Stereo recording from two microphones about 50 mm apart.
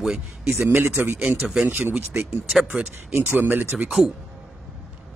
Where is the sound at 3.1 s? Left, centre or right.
Right.